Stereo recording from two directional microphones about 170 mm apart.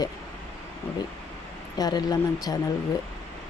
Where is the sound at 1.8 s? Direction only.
25° left (ahead or behind).